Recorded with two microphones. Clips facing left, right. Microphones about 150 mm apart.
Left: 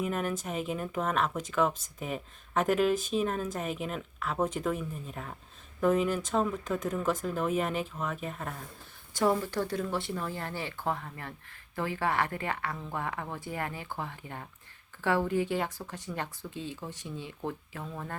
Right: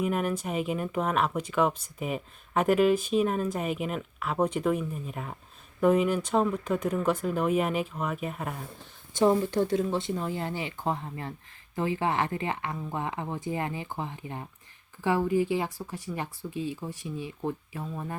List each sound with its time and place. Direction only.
0.0 s speech: centre (ahead or behind)
9.1 s speech: 20° right (ahead or behind)